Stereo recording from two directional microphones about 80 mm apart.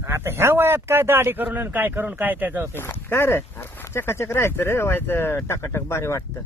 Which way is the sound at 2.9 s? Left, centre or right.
Left.